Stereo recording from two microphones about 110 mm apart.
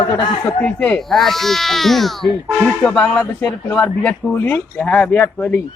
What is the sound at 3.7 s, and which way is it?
Speech, 10° left (ahead or behind).